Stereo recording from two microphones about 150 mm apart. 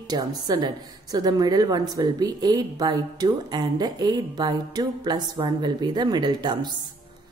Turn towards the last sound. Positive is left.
turn(degrees=-30)  # may be behind; listen again after turning